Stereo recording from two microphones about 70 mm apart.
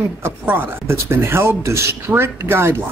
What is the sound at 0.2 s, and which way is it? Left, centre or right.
A woman's voice, right.